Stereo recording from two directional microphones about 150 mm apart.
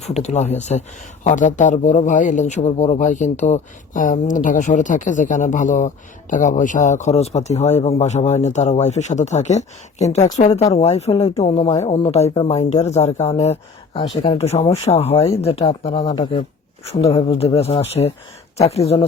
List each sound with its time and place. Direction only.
0.0 s speech: 50° left (ahead or behind)
12.5 s speech: 50° left (ahead or behind)
16.0 s speech: 30° left (ahead or behind)